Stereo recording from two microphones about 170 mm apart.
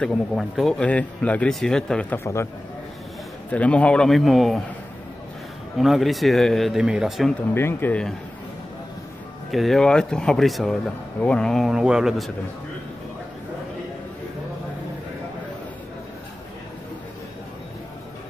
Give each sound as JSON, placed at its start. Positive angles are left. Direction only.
{"t": 0.0, "sound": "speech", "side_deg": 0}
{"t": 3.5, "sound": "speech", "side_deg": 10}
{"t": 5.8, "sound": "speech", "side_deg": 0}
{"t": 7.5, "sound": "speech", "side_deg": 10}
{"t": 9.5, "sound": "speech", "side_deg": 0}